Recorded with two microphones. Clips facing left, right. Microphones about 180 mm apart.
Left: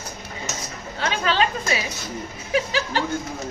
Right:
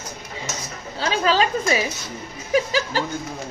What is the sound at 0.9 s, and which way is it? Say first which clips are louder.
A woman's voice: right 2 dB; 35° right (ahead or behind).